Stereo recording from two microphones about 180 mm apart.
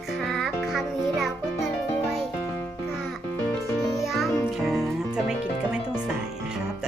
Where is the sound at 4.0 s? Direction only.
Centre (ahead or behind).